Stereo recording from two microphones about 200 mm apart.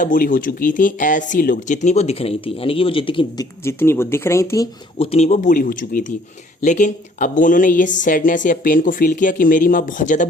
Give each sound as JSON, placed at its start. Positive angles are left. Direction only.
{"t": 0.0, "sound": "speech", "side_deg": 45}
{"t": 3.6, "sound": "speech", "side_deg": 10}
{"t": 4.9, "sound": "speech", "side_deg": 30}